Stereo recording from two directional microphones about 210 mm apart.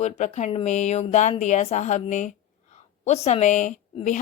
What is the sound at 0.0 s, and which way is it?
A woman's voice, 35° left (ahead or behind).